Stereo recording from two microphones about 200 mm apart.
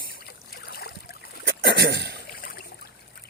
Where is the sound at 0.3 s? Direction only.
55° left (ahead or behind).